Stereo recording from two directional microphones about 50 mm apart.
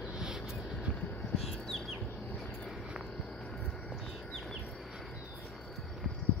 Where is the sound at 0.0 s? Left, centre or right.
Centre.